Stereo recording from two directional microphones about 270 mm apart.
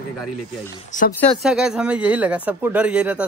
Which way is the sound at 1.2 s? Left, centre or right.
Centre.